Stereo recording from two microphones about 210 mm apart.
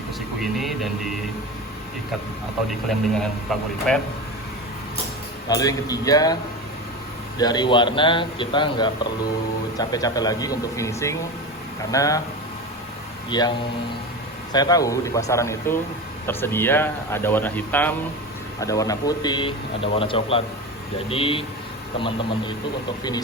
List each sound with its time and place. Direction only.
0.3 s speech: centre (ahead or behind)
3.2 s speech: 5° left (ahead or behind)
5.5 s speech: 15° left (ahead or behind)
7.3 s speech: 20° left (ahead or behind)
13.3 s speech: 20° left (ahead or behind)
14.5 s speech: 20° left (ahead or behind)